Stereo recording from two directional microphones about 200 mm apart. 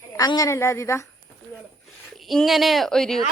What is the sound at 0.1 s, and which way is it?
Speech, 20° left (ahead or behind).